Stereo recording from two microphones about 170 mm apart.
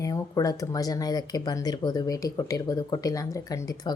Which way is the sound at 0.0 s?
20° left (ahead or behind).